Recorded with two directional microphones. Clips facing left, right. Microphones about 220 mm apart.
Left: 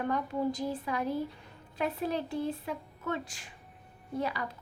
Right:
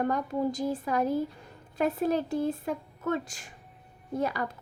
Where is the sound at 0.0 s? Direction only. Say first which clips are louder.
Right 3 dB; 45° right (ahead or behind).